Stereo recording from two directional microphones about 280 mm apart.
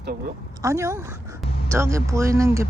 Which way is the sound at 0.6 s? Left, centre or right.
Centre.